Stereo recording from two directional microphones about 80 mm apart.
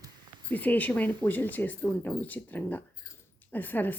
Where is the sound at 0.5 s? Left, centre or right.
Left.